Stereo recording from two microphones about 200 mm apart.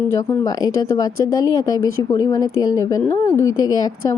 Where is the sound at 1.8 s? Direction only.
90° left.